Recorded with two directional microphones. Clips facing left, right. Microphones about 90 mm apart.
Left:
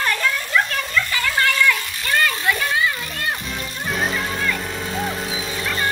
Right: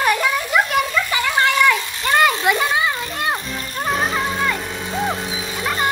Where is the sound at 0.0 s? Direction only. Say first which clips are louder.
Right 4 dB; 15° right (ahead or behind).